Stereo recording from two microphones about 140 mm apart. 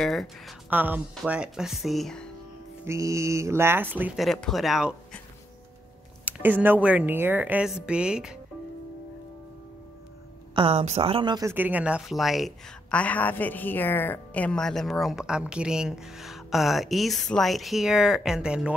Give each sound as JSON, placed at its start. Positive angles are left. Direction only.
{"t": 0.0, "sound": "a woman's voice", "side_deg": 0}
{"t": 0.7, "sound": "a woman's voice", "side_deg": -15}
{"t": 2.9, "sound": "speech", "side_deg": -20}
{"t": 4.2, "sound": "a woman's voice", "side_deg": 0}
{"t": 6.2, "sound": "speech", "side_deg": -10}
{"t": 10.5, "sound": "speech", "side_deg": -40}
{"t": 11.3, "sound": "a woman's voice", "side_deg": -15}